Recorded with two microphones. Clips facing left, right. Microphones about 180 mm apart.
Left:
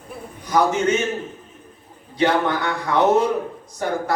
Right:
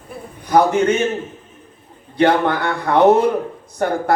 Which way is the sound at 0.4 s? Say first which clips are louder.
Right 4 dB; 60° right (ahead or behind).